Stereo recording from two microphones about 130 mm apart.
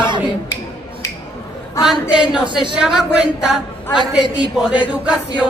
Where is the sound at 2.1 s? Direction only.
5° right (ahead or behind).